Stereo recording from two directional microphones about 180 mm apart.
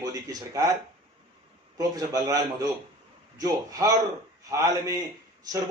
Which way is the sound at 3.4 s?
20° right (ahead or behind).